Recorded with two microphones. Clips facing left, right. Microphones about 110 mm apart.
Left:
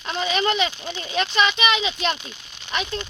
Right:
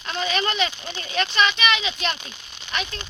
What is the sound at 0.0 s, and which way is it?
Speech, 15° left (ahead or behind).